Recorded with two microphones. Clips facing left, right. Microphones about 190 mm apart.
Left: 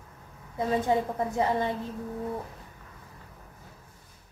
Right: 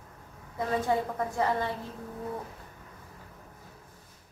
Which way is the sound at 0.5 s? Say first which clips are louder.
Left 2 dB; 20° left (ahead or behind).